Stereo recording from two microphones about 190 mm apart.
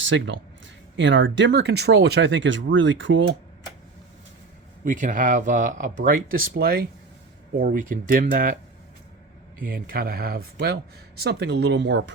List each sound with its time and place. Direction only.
0.0 s speech: 75° right (ahead or behind)
4.9 s speech: 40° right (ahead or behind)
9.6 s speech: 50° right (ahead or behind); by 12.1 s 65° right (ahead or behind)